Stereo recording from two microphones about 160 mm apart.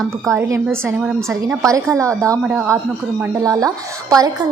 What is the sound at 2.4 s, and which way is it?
Speech, 5° right (ahead or behind).